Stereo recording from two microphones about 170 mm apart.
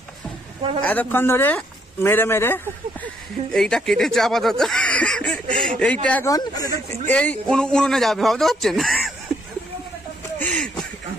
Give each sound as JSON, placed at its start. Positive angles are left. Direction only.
{"t": 0.7, "sound": "speech", "side_deg": 10}
{"t": 6.3, "sound": "speech", "side_deg": 20}
{"t": 7.2, "sound": "speech", "side_deg": 5}
{"t": 10.4, "sound": "a sound", "side_deg": 5}